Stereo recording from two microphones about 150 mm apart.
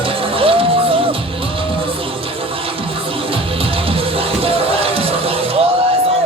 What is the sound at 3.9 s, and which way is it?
Music, 40° right (ahead or behind).